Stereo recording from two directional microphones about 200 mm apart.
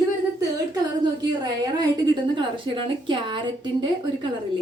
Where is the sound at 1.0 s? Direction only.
20° right (ahead or behind).